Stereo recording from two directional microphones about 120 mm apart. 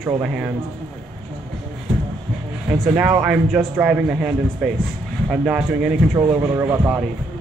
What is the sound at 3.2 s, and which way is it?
Speech, 10° right (ahead or behind).